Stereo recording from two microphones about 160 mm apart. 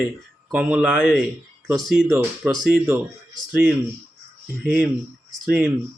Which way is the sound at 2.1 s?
20° right (ahead or behind).